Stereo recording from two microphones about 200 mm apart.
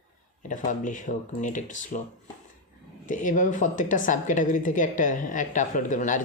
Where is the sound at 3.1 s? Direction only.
40° left (ahead or behind).